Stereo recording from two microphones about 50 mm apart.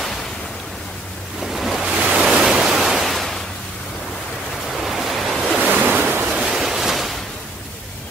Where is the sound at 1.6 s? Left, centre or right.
Centre.